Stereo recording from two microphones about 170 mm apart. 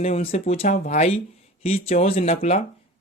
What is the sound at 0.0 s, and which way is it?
Speech, 35° left (ahead or behind).